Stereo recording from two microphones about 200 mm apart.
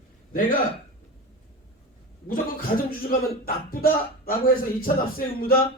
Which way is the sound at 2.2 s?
45° left (ahead or behind).